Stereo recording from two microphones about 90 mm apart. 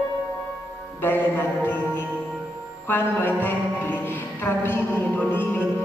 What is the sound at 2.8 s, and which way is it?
Music, 25° left (ahead or behind).